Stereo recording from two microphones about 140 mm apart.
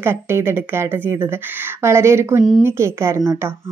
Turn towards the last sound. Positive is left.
turn(degrees=-20)  # may be behind; listen again after turning